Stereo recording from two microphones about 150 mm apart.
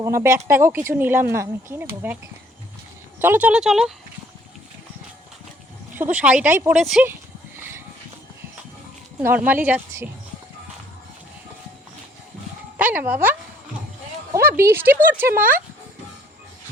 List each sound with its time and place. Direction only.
0.0 s speech: 20° right (ahead or behind); by 3.9 s 5° right (ahead or behind)
6.0 s speech: 10° right (ahead or behind)
9.2 s speech: 10° right (ahead or behind)
12.7 s speech: 10° right (ahead or behind)
14.4 s speech: 15° right (ahead or behind)